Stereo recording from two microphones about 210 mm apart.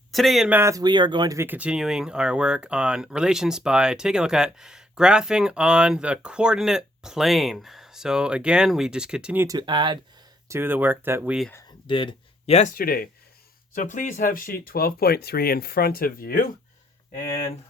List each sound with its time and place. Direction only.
0.1 s speech: centre (ahead or behind)
9.6 s speech: 20° right (ahead or behind)
10.5 s speech: 10° right (ahead or behind)
11.9 s speech: 25° left (ahead or behind); by 16.6 s 45° left (ahead or behind)